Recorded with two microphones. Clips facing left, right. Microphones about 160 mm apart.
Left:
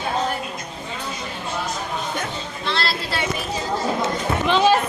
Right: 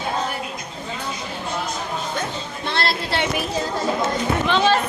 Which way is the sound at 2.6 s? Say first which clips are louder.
Right 1 dB; 55° right (ahead or behind).